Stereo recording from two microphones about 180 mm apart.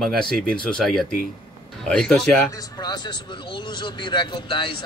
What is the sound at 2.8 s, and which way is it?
Speech, 25° left (ahead or behind).